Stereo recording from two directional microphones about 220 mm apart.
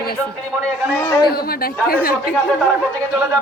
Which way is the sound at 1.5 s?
40° left (ahead or behind).